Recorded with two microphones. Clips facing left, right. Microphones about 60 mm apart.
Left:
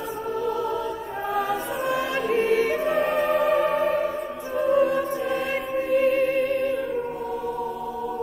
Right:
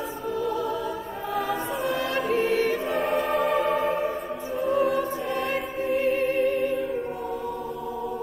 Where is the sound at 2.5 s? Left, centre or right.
Centre.